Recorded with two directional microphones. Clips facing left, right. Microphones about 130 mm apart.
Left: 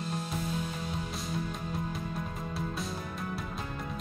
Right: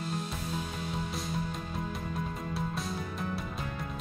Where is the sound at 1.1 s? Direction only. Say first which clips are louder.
Even; centre (ahead or behind).